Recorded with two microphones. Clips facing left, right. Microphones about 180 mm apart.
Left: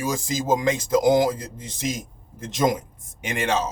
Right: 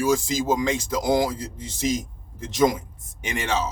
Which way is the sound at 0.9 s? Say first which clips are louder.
Left 5 dB; 20° left (ahead or behind).